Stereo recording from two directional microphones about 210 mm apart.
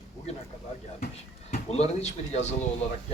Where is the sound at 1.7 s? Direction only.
30° left (ahead or behind).